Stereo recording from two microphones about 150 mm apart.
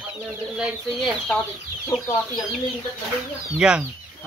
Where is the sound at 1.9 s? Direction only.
25° left (ahead or behind).